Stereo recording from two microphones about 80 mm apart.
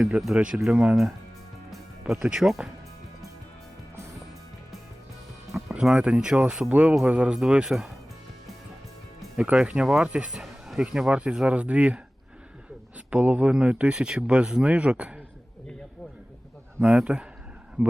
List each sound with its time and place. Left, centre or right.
0.3 s speech: centre
1.7 s music: centre
5.5 s speech: centre
9.3 s speech: centre
13.1 s speech: centre
16.8 s speech: centre